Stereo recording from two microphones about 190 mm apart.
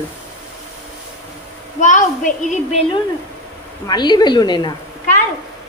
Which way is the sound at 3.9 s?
20° left (ahead or behind).